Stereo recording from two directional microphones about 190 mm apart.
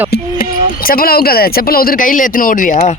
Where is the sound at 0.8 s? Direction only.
50° left (ahead or behind).